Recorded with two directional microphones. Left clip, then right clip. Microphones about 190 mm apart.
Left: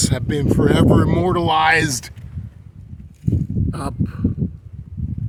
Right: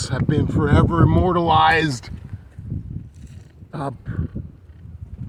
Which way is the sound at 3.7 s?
25° left (ahead or behind).